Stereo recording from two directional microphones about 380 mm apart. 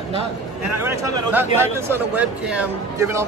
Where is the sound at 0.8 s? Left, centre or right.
Centre.